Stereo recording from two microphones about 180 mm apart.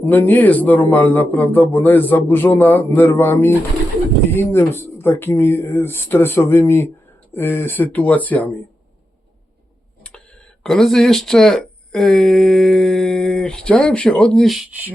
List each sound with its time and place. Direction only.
0.0 s a man's voice: 10° left (ahead or behind)
10.6 s speech: centre (ahead or behind)